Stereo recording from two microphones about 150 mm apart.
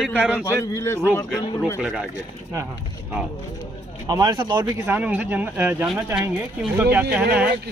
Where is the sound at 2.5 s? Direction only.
20° right (ahead or behind).